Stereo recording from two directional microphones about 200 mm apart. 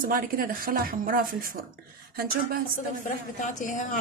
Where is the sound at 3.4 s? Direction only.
40° left (ahead or behind).